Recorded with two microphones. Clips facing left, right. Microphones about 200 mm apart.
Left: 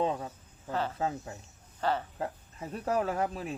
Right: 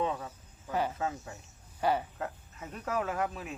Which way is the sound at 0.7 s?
15° right (ahead or behind).